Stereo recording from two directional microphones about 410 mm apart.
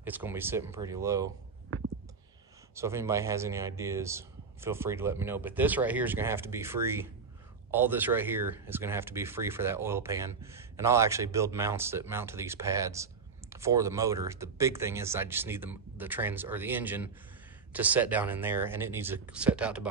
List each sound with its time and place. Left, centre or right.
0.0 s speech: centre
2.7 s speech: centre